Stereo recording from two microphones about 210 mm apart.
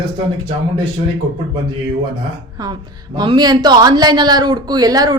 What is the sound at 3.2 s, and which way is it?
Speech, 20° right (ahead or behind).